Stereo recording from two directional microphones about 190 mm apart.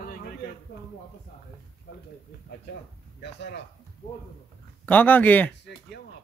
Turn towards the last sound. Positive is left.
turn(degrees=10)  # may be behind; listen again after turning